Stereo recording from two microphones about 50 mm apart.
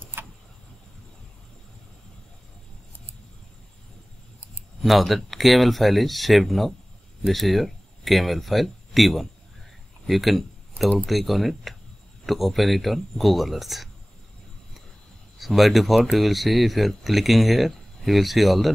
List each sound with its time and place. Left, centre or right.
0.0 s vehicle: right
4.8 s speech: centre
15.3 s speech: centre